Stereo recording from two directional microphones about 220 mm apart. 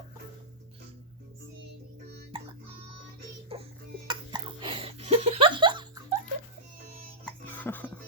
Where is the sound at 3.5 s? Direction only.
25° right (ahead or behind).